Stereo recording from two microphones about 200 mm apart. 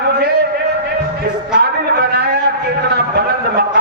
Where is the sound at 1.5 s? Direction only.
55° right (ahead or behind).